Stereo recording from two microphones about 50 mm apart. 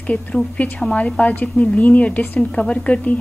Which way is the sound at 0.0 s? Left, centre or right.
Left.